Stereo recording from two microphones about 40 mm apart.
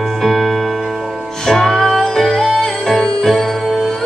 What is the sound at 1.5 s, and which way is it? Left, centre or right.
Music, centre.